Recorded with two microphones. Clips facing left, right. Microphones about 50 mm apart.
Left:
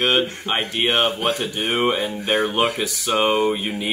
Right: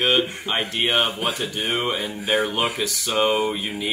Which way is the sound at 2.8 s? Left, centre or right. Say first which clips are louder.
Left 1 dB; centre.